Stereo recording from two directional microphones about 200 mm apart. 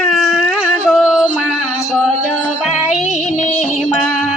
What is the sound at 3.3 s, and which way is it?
Music, 35° left (ahead or behind).